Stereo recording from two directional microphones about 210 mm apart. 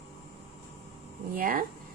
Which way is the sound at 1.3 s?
40° right (ahead or behind).